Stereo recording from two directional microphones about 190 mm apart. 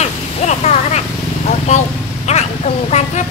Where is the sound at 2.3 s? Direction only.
35° left (ahead or behind).